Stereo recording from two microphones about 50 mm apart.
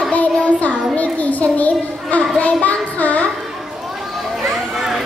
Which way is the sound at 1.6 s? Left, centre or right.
Left.